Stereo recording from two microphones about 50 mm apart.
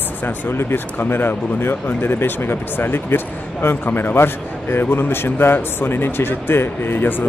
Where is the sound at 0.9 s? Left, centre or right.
Left.